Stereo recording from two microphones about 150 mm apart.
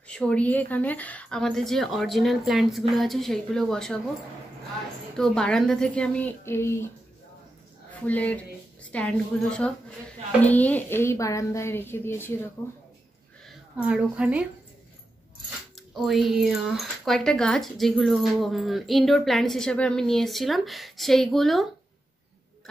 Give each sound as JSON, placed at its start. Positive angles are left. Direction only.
{"t": 0.1, "sound": "speech", "side_deg": 10}
{"t": 5.1, "sound": "speech", "side_deg": 5}
{"t": 8.1, "sound": "speech", "side_deg": 10}
{"t": 13.7, "sound": "a woman's voice", "side_deg": -5}
{"t": 15.7, "sound": "speech", "side_deg": 0}